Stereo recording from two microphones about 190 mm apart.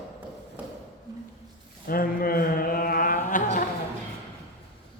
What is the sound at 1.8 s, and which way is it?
Chant, 50° left (ahead or behind).